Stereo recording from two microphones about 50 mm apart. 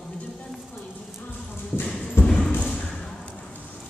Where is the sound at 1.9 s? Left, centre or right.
Left.